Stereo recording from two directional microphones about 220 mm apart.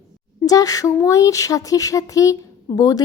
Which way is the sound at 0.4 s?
15° left (ahead or behind).